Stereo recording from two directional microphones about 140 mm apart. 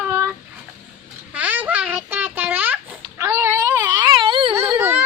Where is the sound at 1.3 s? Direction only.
10° right (ahead or behind); by 4.5 s 40° right (ahead or behind).